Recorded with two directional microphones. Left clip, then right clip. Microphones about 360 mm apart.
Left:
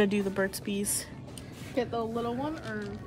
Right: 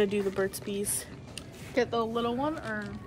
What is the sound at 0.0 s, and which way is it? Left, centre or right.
Speech, centre.